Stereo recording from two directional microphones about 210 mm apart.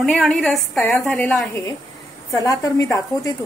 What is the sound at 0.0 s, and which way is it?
A woman's voice, centre (ahead or behind).